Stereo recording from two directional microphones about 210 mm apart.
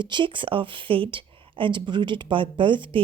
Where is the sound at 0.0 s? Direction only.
20° right (ahead or behind).